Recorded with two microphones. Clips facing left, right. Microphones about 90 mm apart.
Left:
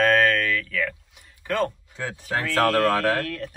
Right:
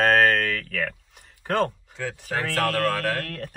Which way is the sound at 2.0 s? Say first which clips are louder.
Left 1 dB; 20° left (ahead or behind).